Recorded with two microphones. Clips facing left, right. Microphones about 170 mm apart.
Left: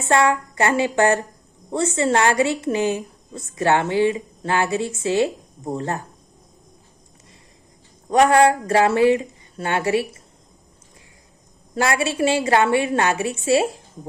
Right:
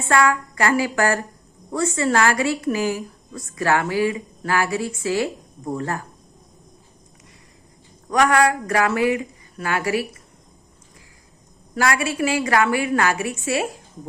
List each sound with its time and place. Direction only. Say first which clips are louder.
0.1 s a woman's voice: left 1 dB; 25° left (ahead or behind)
8.1 s a woman's voice: left 3 dB; 30° left (ahead or behind)
11.7 s a woman's voice: left 1 dB; 25° left (ahead or behind)